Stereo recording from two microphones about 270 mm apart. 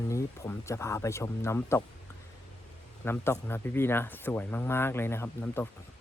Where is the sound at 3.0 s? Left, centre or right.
Centre.